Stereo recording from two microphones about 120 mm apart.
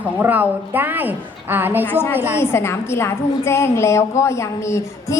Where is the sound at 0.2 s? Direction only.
15° right (ahead or behind).